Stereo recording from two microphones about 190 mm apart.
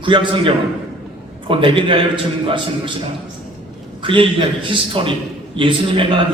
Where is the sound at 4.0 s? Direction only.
25° right (ahead or behind).